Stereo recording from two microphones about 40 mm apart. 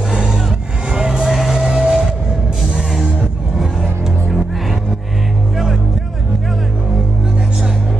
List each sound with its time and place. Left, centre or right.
0.1 s music: right
1.3 s music: centre
1.6 s vehicle: centre